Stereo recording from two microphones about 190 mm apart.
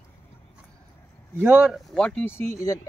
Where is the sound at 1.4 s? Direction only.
10° right (ahead or behind); by 2.8 s 15° left (ahead or behind).